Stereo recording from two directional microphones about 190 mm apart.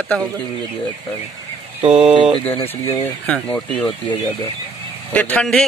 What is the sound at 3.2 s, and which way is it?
Speech, 5° left (ahead or behind).